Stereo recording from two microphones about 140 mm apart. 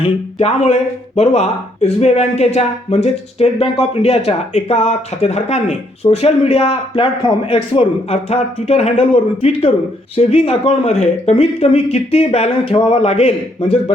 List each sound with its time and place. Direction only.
0.0 s speech: 50° left (ahead or behind)